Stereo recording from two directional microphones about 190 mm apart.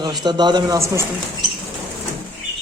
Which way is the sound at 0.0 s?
20° right (ahead or behind).